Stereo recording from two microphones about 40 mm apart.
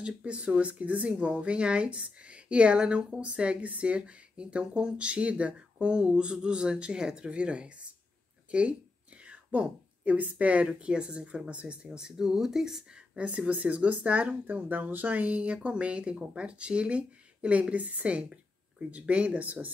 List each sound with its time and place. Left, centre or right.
0.0 s a woman's voice: right
12.0 s speech: centre
13.5 s speech: right
14.4 s speech: right